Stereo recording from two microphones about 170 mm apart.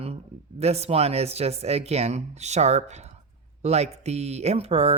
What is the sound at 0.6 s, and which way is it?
A woman's voice, 40° right (ahead or behind).